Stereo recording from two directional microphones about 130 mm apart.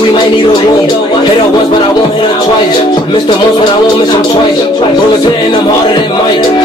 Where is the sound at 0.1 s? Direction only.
35° left (ahead or behind).